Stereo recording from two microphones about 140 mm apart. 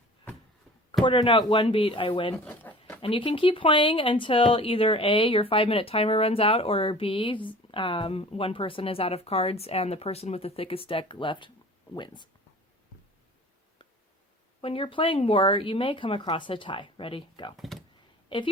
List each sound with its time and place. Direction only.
1.0 s speech: 35° left (ahead or behind)
2.4 s bird: 10° left (ahead or behind)
3.0 s speech: 40° left (ahead or behind)
14.6 s speech: 40° left (ahead or behind)
17.6 s a sound: centre (ahead or behind)
18.3 s a woman's voice: 35° left (ahead or behind)